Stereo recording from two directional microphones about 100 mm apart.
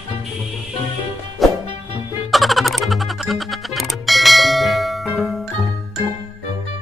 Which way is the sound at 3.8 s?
Centre (ahead or behind).